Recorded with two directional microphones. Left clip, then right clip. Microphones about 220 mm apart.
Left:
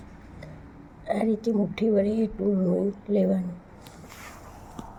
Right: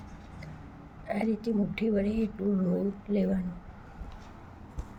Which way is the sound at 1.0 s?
15° left (ahead or behind).